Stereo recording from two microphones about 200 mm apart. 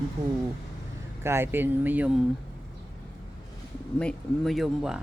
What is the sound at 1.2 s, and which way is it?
Speech, 10° right (ahead or behind).